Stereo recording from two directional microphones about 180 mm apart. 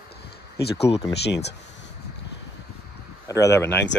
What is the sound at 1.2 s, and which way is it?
Speech, 70° left (ahead or behind).